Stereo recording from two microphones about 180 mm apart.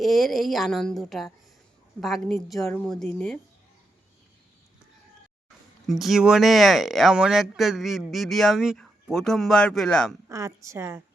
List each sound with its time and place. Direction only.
0.0 s speech: centre (ahead or behind)
5.9 s speech: centre (ahead or behind)
10.2 s a woman's voice: 15° right (ahead or behind)